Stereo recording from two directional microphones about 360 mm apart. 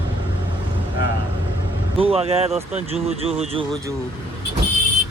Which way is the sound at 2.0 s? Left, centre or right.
Centre.